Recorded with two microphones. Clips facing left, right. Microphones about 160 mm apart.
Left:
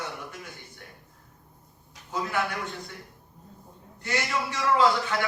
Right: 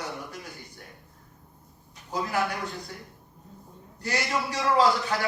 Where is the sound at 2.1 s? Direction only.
35° right (ahead or behind).